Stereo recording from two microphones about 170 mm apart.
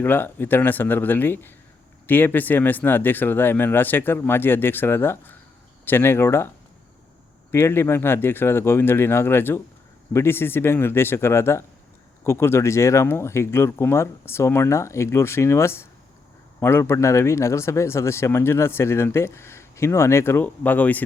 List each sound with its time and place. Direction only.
0.0 s speech: 10° left (ahead or behind)
7.5 s speech: 15° left (ahead or behind)